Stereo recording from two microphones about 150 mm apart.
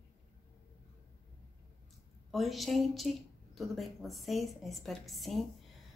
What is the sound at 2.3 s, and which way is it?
A woman's voice, centre (ahead or behind).